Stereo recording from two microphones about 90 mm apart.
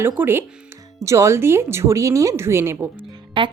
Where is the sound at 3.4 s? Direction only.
70° right (ahead or behind).